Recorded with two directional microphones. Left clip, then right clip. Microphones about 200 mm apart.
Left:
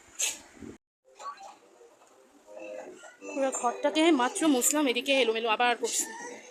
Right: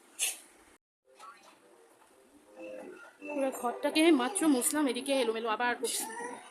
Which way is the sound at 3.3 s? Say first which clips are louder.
Left 4 dB; 10° right (ahead or behind).